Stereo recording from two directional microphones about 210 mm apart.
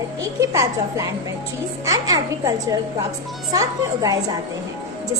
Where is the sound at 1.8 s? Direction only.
15° right (ahead or behind).